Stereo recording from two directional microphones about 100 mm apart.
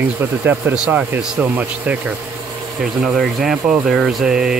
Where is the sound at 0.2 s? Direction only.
20° right (ahead or behind).